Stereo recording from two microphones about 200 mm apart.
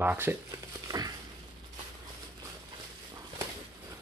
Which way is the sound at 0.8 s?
20° right (ahead or behind).